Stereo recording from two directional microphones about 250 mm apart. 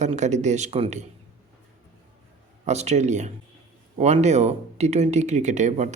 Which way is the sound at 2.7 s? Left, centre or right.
Right.